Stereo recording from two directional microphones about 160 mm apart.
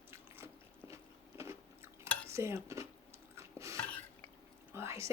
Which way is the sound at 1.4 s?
15° right (ahead or behind).